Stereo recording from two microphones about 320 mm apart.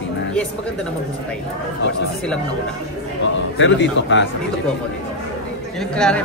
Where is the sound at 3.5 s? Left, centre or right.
Left.